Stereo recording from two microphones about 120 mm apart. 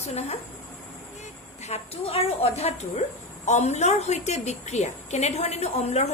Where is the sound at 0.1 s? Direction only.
65° left (ahead or behind).